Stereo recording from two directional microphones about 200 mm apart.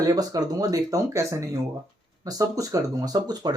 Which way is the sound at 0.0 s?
20° right (ahead or behind).